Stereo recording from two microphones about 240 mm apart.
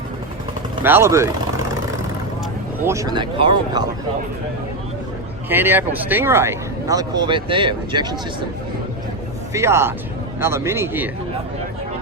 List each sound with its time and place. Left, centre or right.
0.8 s speech: centre
2.8 s speech: centre
5.5 s speech: centre
9.5 s speech: centre